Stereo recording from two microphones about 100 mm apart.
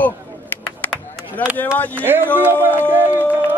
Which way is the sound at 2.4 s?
20° right (ahead or behind).